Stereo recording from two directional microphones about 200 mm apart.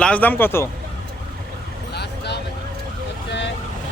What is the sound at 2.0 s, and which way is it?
Vehicle, 55° left (ahead or behind).